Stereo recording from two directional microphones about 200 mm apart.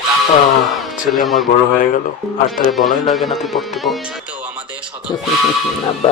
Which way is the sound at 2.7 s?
Centre (ahead or behind).